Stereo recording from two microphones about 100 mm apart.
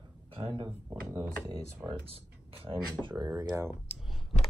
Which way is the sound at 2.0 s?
70° right (ahead or behind).